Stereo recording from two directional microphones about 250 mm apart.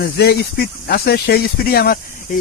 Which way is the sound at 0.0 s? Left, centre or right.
Left.